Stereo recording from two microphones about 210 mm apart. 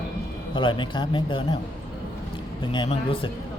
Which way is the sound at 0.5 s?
20° left (ahead or behind).